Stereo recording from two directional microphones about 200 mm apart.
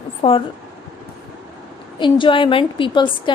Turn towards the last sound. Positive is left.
turn(degrees=25)  # may be behind; listen again after turning